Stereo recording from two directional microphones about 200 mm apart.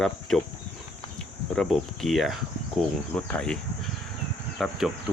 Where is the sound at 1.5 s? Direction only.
Centre (ahead or behind).